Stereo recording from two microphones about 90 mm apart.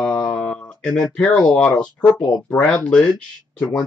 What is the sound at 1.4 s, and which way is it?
Speech, 10° left (ahead or behind).